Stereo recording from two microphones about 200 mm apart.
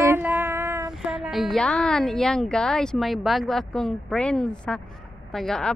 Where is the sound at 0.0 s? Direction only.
10° right (ahead or behind).